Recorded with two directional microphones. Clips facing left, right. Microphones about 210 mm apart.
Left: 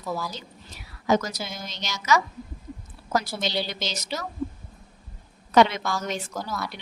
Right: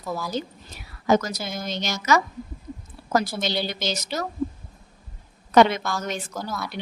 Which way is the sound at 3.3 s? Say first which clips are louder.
Right 2 dB; 50° right (ahead or behind).